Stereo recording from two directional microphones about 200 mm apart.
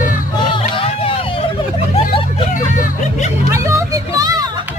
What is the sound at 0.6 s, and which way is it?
Hubbub, 30° left (ahead or behind).